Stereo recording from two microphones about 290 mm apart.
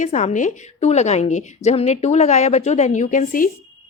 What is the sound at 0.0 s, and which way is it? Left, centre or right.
A woman's voice, left.